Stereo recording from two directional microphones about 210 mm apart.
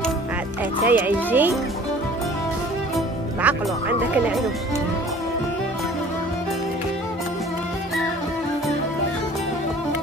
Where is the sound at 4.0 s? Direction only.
5° right (ahead or behind).